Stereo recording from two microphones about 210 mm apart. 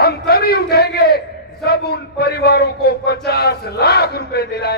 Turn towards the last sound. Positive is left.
turn(degrees=50)  # may be behind; listen again after turning